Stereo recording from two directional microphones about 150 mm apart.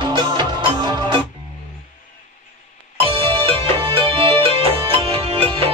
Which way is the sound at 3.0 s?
40° right (ahead or behind).